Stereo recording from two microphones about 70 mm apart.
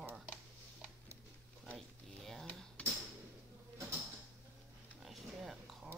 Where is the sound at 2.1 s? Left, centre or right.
Centre.